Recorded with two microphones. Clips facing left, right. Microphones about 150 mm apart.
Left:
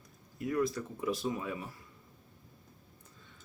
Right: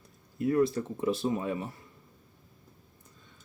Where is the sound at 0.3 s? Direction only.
30° right (ahead or behind).